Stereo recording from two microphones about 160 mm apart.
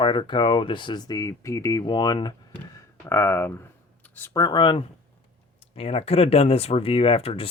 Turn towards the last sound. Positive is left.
turn(degrees=35)  # may be behind; listen again after turning